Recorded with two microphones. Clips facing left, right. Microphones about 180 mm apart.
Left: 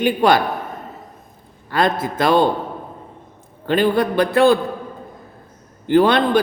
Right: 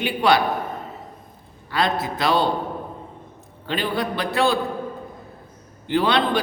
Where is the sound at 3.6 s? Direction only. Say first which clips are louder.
Left 8 dB; 50° left (ahead or behind).